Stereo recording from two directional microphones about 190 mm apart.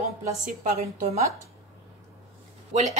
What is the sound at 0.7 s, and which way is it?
Speech, 35° right (ahead or behind).